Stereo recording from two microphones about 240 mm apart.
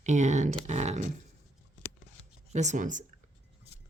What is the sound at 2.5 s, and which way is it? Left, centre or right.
Speech, right.